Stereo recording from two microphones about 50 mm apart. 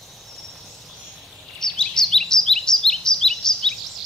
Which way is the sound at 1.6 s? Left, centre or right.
Centre.